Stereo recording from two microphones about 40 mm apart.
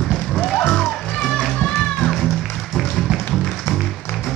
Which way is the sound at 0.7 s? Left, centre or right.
Centre.